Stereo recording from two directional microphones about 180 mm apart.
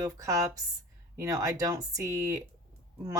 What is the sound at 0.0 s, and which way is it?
Speech, 15° right (ahead or behind).